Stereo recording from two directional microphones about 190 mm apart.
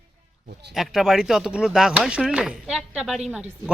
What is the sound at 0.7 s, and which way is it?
Speech, centre (ahead or behind).